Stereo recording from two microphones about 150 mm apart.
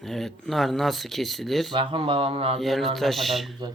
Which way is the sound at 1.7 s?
35° right (ahead or behind).